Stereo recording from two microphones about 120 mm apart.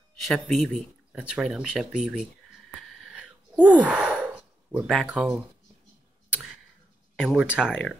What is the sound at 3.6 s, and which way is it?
Sigh, 10° right (ahead or behind).